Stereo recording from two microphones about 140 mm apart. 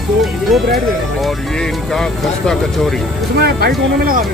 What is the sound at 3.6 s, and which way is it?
Speech, 90° right.